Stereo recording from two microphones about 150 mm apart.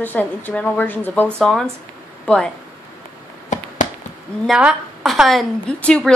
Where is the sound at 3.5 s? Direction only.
55° left (ahead or behind).